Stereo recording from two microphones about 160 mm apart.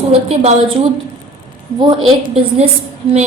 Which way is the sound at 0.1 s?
40° right (ahead or behind).